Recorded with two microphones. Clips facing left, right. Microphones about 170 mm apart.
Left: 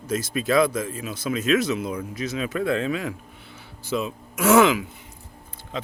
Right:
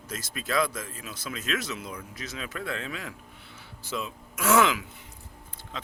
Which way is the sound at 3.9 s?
20° left (ahead or behind).